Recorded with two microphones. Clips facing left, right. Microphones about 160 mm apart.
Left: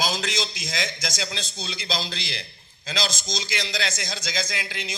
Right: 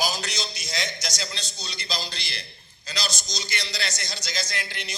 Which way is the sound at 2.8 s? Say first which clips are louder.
Left 4 dB; 90° left.